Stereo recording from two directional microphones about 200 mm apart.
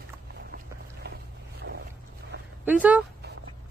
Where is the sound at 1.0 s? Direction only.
55° right (ahead or behind).